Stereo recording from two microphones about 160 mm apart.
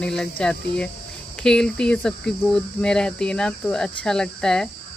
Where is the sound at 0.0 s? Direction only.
5° left (ahead or behind).